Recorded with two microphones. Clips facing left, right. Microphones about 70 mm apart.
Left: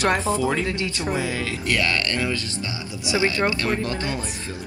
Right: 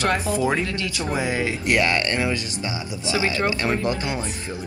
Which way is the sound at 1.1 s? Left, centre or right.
Right.